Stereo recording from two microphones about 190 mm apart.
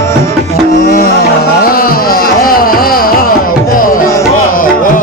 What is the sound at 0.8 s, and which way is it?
Music, 50° left (ahead or behind).